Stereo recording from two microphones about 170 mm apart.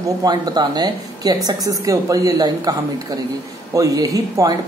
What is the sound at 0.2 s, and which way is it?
Speech, 25° right (ahead or behind).